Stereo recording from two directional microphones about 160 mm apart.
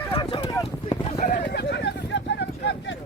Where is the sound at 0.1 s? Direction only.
30° left (ahead or behind).